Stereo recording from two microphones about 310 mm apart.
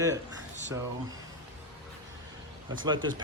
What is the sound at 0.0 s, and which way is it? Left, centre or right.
Speech, centre.